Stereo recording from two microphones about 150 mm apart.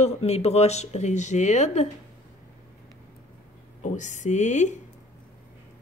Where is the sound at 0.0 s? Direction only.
45° left (ahead or behind).